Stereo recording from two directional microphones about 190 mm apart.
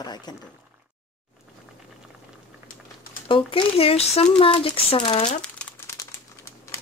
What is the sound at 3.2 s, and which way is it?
Speech, 25° left (ahead or behind).